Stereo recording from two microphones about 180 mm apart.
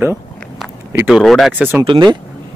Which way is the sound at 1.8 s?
25° right (ahead or behind).